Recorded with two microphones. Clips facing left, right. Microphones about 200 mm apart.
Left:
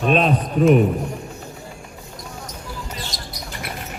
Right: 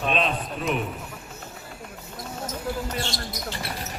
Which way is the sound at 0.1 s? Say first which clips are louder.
Left 8 dB; 45° left (ahead or behind).